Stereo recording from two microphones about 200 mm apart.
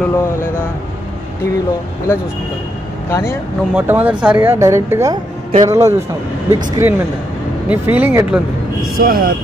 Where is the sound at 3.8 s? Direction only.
10° right (ahead or behind).